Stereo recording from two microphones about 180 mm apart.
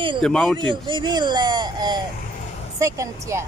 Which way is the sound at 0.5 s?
25° right (ahead or behind).